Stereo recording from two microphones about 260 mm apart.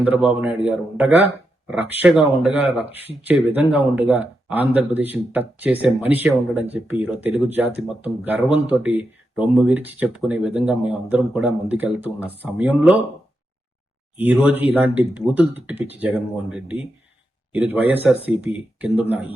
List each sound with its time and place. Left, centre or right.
0.0 s a man's voice: centre
14.2 s a man's voice: centre